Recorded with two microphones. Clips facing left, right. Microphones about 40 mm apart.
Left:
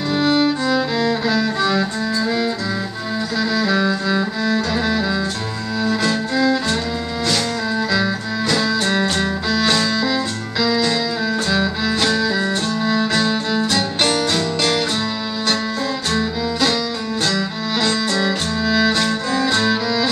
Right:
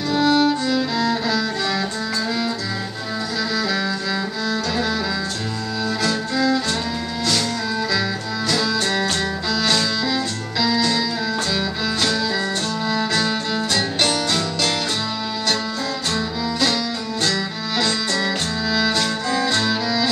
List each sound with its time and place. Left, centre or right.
0.1 s music: left
3.5 s music: centre
7.9 s music: centre
10.6 s keyboard: centre
11.5 s music: centre
16.1 s music: centre